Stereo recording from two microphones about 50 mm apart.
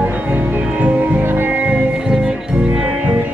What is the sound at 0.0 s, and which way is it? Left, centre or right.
Music, right.